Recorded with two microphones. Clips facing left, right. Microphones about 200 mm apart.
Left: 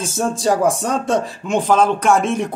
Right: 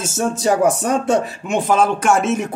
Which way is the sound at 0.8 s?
10° right (ahead or behind).